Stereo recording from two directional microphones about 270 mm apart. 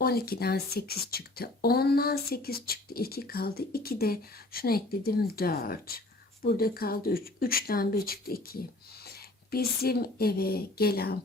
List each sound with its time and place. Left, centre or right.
0.0 s speech: left